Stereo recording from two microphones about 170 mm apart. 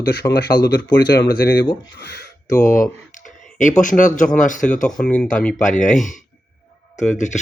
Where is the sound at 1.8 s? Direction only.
90° left.